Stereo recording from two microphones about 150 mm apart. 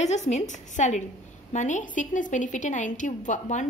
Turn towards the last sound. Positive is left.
turn(degrees=55)  # may be behind; listen again after turning